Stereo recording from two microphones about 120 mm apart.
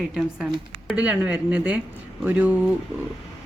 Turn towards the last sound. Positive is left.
turn(degrees=-15)  # may be behind; listen again after turning